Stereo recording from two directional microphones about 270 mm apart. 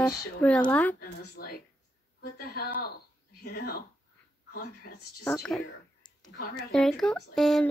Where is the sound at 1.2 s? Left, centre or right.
Left.